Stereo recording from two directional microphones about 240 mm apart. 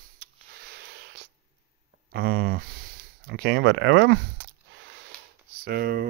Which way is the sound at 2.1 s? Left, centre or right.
Right.